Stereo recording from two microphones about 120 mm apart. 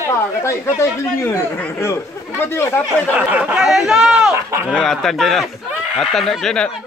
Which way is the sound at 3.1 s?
10° right (ahead or behind).